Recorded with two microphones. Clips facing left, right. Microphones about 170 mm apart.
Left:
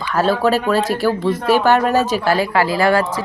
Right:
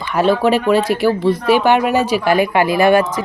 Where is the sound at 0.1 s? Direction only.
15° right (ahead or behind).